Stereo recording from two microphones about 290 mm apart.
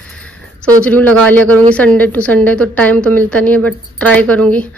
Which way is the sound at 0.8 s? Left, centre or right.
Centre.